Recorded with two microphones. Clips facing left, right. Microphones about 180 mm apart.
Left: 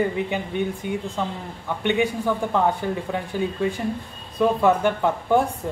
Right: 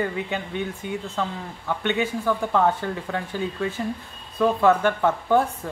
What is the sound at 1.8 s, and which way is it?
A woman's voice, 15° left (ahead or behind).